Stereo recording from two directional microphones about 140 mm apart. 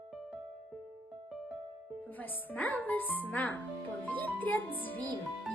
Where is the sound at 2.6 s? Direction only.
10° left (ahead or behind).